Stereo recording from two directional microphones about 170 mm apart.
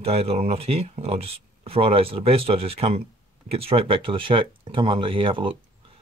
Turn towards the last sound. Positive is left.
turn(degrees=-30)  # may be behind; listen again after turning